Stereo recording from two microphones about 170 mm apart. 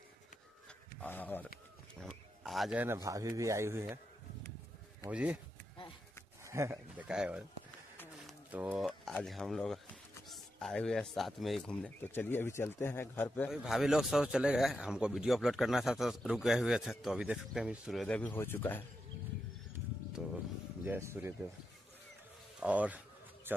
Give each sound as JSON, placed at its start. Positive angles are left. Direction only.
{"t": 1.0, "sound": "speech", "side_deg": 10}
{"t": 2.0, "sound": "wild animals", "side_deg": 0}
{"t": 2.8, "sound": "a man's voice", "side_deg": -15}
{"t": 5.0, "sound": "a man's voice", "side_deg": -10}
{"t": 6.4, "sound": "a man's voice", "side_deg": -15}
{"t": 8.3, "sound": "a sound", "side_deg": -10}
{"t": 8.8, "sound": "speech", "side_deg": 0}
{"t": 13.5, "sound": "speech", "side_deg": 0}
{"t": 18.0, "sound": "speech", "side_deg": 10}
{"t": 20.2, "sound": "music", "side_deg": 0}
{"t": 20.8, "sound": "a man's voice", "side_deg": -15}
{"t": 22.6, "sound": "a sound", "side_deg": -10}